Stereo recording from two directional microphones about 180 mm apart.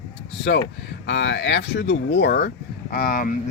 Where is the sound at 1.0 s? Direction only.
85° left.